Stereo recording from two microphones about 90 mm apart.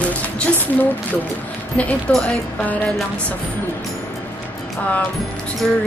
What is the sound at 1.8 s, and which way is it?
A woman's voice, 15° left (ahead or behind).